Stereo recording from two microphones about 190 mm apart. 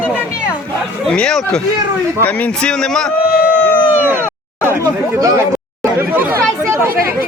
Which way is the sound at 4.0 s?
10° right (ahead or behind).